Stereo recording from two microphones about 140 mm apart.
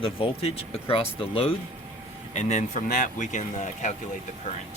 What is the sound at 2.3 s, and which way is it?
Speech, 60° left (ahead or behind).